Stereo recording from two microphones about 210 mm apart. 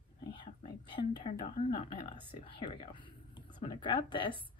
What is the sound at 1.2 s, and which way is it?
Speech, 30° left (ahead or behind).